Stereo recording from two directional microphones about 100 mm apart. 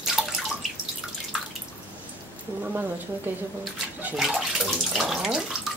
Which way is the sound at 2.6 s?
20° right (ahead or behind).